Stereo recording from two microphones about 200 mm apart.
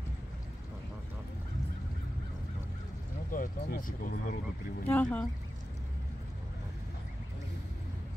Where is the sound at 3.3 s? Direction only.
45° left (ahead or behind).